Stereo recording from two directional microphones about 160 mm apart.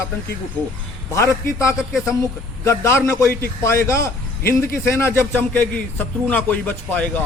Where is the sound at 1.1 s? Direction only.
15° left (ahead or behind).